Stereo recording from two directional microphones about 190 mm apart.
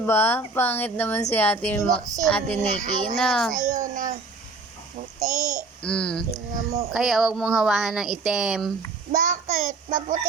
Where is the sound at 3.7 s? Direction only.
45° right (ahead or behind).